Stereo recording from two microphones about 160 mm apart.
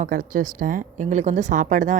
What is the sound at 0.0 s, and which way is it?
A woman's voice, 55° right (ahead or behind).